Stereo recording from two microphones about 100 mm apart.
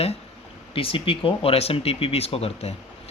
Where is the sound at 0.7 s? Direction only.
65° left (ahead or behind).